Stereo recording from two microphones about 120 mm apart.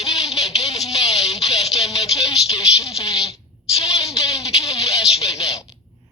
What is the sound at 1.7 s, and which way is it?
A woman's voice, 30° left (ahead or behind).